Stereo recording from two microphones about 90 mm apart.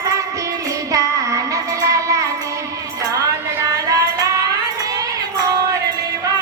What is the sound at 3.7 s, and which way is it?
Music, 40° right (ahead or behind).